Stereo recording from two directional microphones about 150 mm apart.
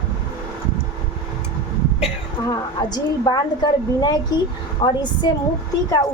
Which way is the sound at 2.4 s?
25° left (ahead or behind).